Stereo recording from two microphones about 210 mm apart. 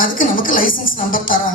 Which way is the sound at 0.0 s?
40° left (ahead or behind).